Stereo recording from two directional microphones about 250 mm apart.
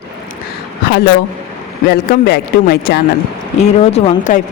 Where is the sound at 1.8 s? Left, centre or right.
Left.